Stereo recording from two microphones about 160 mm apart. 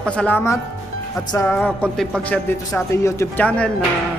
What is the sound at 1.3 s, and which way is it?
Music, 20° left (ahead or behind).